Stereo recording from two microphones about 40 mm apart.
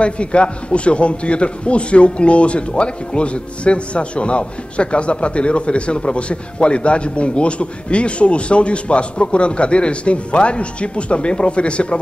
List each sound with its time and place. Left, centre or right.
0.0 s a man's voice: left